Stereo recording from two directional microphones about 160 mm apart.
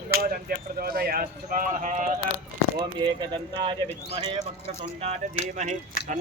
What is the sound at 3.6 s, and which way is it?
Speech, 30° right (ahead or behind).